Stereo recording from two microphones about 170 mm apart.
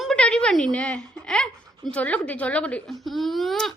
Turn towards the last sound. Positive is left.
turn(degrees=0)  # may be behind; listen again after turning